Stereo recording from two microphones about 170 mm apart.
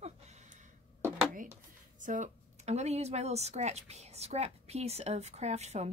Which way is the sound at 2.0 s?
45° right (ahead or behind).